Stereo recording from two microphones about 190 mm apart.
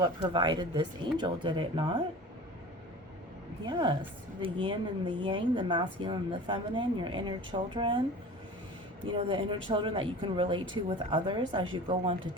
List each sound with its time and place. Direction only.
0.0 s speech: 25° right (ahead or behind)
3.7 s speech: 25° right (ahead or behind)
9.0 s speech: 25° right (ahead or behind)